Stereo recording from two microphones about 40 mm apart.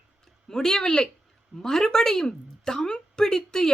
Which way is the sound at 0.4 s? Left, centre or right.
Centre.